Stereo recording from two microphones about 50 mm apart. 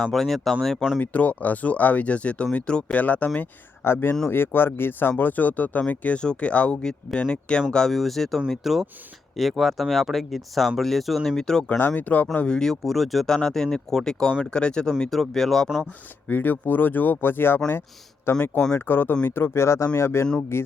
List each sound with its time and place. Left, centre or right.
0.1 s speech: centre
0.9 s speech: left
3.8 s speech: left; by 7.9 s centre
7.9 s speech: centre
11.8 s speech: left
12.5 s speech: centre
13.3 s speech: centre
16.3 s speech: left